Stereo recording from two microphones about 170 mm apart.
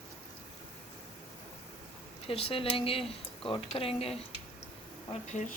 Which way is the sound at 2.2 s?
35° left (ahead or behind).